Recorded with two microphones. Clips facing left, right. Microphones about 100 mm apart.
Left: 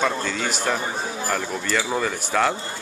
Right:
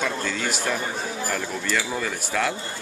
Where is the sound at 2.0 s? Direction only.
Centre (ahead or behind).